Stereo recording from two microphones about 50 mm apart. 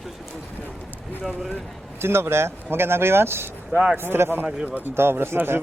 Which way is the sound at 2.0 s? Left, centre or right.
Right.